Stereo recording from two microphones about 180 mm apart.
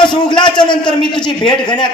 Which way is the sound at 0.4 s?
25° left (ahead or behind).